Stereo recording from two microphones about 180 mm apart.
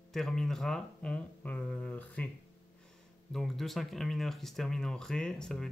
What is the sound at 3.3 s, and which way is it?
Speech, centre (ahead or behind).